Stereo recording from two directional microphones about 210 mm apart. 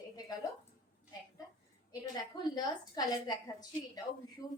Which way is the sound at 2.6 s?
20° left (ahead or behind).